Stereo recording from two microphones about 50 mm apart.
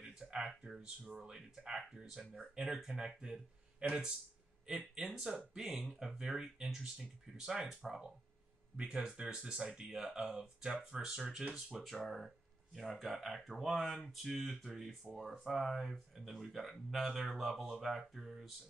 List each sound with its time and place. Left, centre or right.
0.0 s speech: centre